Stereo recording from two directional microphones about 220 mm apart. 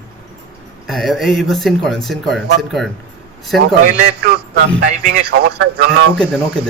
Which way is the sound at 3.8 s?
40° right (ahead or behind).